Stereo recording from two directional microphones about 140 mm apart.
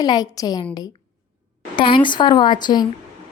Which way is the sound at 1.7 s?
35° left (ahead or behind).